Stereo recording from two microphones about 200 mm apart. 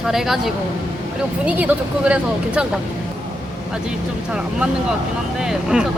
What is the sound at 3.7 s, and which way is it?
Speech, 5° right (ahead or behind).